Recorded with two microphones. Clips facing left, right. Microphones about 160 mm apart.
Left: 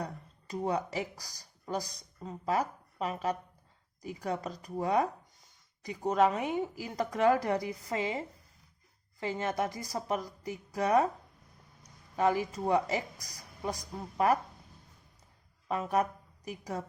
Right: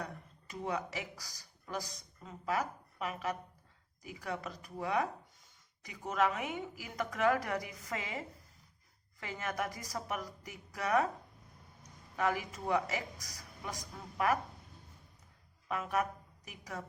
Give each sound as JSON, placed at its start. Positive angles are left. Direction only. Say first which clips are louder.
{"t": 0.0, "sound": "a woman's voice", "louder": "left 4 dB", "side_deg": 35}
{"t": 9.2, "sound": "a woman's voice", "louder": "left 6 dB", "side_deg": 30}
{"t": 12.1, "sound": "a woman's voice", "louder": "left 6 dB", "side_deg": 30}
{"t": 15.7, "sound": "a woman's voice", "louder": "left 5 dB", "side_deg": 30}